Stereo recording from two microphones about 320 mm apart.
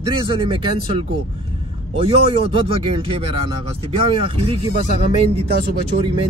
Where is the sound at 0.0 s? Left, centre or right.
Centre.